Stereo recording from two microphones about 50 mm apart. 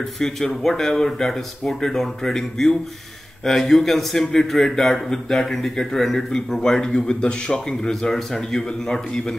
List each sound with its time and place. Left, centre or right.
0.2 s a man's voice: centre